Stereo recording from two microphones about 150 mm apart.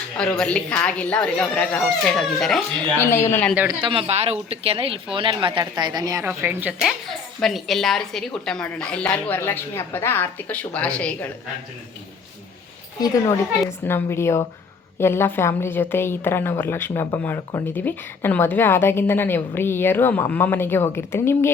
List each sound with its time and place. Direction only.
0.3 s a woman's voice: 10° left (ahead or behind)
3.0 s a woman's voice: 15° left (ahead or behind)
3.7 s speech: 35° right (ahead or behind); by 6.7 s 15° right (ahead or behind)
6.8 s a woman's voice: centre (ahead or behind)
13.7 s a woman's voice: 15° left (ahead or behind)